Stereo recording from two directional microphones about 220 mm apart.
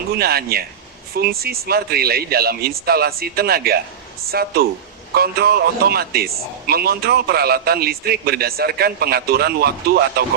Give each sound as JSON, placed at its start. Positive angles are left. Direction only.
{"t": 0.2, "sound": "a man's voice", "side_deg": -45}